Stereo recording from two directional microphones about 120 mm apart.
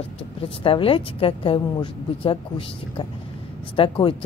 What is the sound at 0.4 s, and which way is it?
Speech, 50° left (ahead or behind).